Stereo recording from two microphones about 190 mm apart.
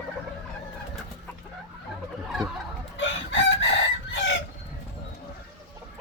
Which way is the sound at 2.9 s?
85° left.